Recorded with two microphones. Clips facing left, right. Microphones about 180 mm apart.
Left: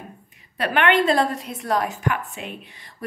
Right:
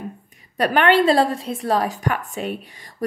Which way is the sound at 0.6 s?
35° right (ahead or behind).